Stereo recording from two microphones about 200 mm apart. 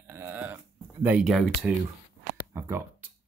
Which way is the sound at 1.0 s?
5° right (ahead or behind).